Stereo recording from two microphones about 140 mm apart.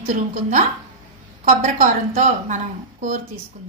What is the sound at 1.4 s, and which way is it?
A woman's voice, 65° right (ahead or behind).